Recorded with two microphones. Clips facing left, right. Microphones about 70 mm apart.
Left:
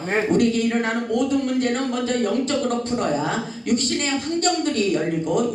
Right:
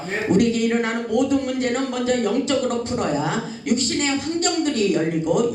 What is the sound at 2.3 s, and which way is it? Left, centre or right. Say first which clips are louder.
A woman's voice: right 1 dB; left.